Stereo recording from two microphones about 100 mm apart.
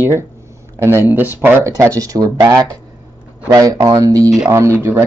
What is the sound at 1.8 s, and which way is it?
Speech, 35° right (ahead or behind).